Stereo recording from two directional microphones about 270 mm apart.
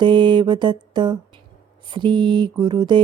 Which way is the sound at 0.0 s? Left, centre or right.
Centre.